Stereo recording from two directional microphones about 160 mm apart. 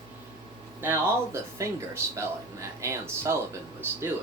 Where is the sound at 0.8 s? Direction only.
15° right (ahead or behind).